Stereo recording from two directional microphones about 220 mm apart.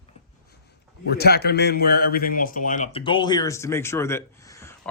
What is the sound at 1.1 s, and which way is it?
Speech, 45° left (ahead or behind).